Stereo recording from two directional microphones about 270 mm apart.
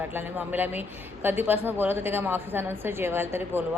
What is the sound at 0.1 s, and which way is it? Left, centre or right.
Speech, centre.